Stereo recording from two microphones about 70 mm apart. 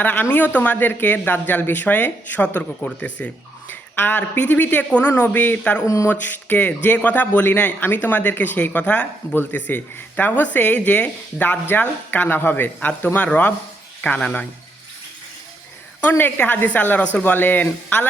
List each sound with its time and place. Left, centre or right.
0.0 s speech: left
5.8 s speech: left
6.1 s speech: left
16.0 s speech: left